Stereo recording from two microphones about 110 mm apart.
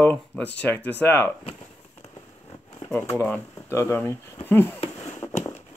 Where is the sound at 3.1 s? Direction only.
10° left (ahead or behind).